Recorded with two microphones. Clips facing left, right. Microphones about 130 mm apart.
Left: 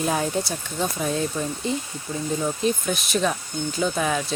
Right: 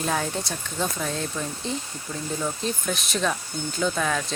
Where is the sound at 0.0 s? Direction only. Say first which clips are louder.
Left 3 dB; 10° left (ahead or behind).